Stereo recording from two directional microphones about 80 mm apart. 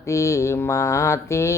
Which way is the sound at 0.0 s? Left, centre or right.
Left.